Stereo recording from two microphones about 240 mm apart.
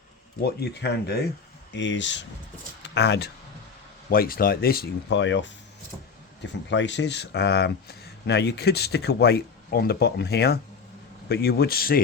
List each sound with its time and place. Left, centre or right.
0.4 s speech: left